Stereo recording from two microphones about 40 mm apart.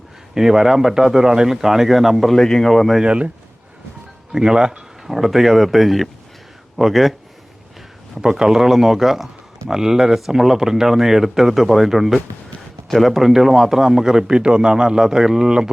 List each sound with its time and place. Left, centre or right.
0.3 s speech: centre
2.3 s speech: centre
3.0 s speech: right
4.3 s speech: centre
5.1 s speech: centre
8.2 s speech: centre